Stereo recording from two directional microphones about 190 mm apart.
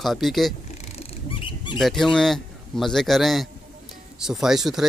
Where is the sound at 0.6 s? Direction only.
35° left (ahead or behind).